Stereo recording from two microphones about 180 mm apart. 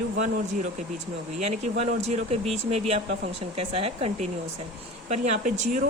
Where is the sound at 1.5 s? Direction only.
40° right (ahead or behind).